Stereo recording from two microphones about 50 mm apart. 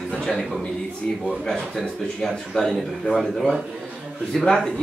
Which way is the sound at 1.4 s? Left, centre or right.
Centre.